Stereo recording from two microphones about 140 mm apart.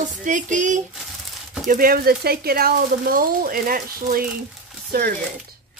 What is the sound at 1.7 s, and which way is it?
Speech, 90° right.